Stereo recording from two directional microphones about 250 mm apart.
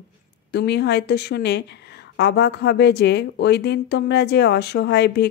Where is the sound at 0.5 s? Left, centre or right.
Left.